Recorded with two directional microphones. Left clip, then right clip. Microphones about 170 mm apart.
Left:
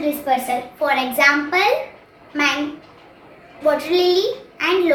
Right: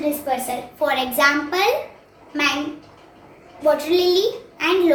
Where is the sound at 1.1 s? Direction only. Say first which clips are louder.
Left 3 dB; 25° right (ahead or behind).